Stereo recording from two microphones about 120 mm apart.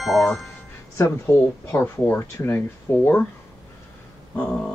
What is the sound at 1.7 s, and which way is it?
Speech, 20° left (ahead or behind).